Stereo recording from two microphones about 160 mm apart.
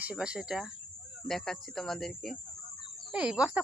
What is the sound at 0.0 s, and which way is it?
Speech, 5° right (ahead or behind).